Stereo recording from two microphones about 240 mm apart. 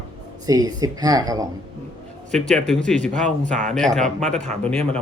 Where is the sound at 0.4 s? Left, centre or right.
Centre.